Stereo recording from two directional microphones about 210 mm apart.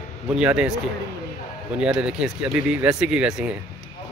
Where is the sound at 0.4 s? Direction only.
5° right (ahead or behind).